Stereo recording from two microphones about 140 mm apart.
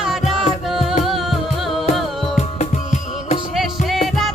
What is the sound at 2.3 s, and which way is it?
Music, 55° left (ahead or behind).